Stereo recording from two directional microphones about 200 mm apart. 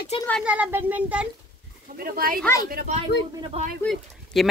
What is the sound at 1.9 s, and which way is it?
Speech, 45° right (ahead or behind).